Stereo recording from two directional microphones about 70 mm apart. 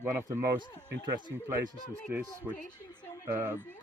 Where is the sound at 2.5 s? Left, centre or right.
Right.